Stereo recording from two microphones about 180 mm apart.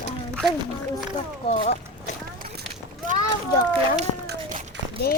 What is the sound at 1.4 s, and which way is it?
Speech, 30° left (ahead or behind).